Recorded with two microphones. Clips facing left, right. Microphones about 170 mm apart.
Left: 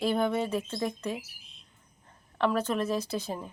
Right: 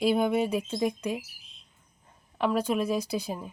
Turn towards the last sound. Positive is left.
turn(degrees=-10)  # may be behind; listen again after turning